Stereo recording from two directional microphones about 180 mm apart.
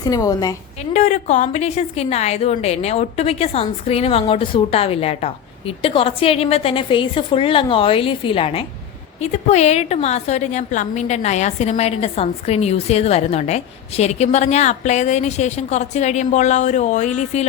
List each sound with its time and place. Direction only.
0.0 s a woman's voice: 20° left (ahead or behind)
0.9 s a woman's voice: 40° left (ahead or behind)